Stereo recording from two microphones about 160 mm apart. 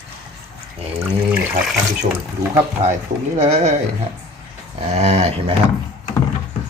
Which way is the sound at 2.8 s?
40° right (ahead or behind).